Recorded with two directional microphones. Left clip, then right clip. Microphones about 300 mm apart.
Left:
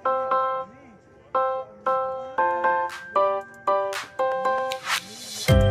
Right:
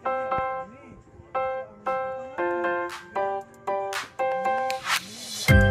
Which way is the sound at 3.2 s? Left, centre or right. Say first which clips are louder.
Left 6 dB; centre.